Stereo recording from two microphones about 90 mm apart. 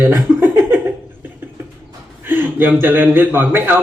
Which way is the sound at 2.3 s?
25° right (ahead or behind).